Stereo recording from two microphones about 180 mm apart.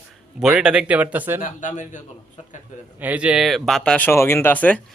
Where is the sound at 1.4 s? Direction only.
45° left (ahead or behind).